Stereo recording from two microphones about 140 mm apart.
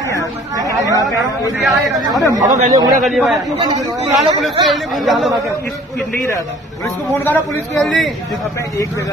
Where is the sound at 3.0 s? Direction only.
Centre (ahead or behind).